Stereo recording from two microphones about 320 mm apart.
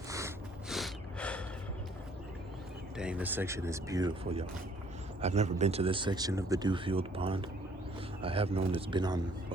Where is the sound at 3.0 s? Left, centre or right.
Centre.